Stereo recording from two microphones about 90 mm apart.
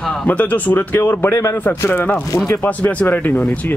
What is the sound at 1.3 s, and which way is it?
Speech, 35° left (ahead or behind).